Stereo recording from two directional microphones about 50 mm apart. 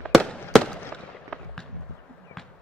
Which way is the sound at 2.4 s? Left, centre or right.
Centre.